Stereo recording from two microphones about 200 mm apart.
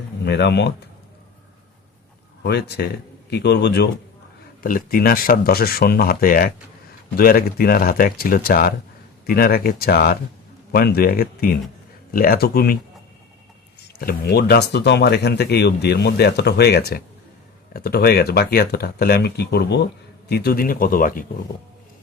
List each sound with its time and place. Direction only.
0.3 s speech: 55° left (ahead or behind)
2.4 s speech: 55° left (ahead or behind)
4.6 s speech: 45° left (ahead or behind)
14.0 s speech: 50° left (ahead or behind)